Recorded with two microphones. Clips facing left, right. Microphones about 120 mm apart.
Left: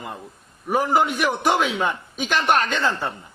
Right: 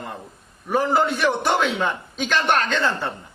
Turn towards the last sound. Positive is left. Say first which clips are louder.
# even
turn(degrees=10)  # may be behind; listen again after turning